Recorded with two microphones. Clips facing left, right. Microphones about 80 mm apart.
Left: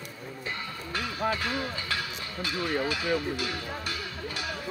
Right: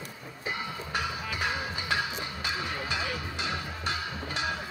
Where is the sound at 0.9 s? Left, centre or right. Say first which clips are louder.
Left 4 dB; centre.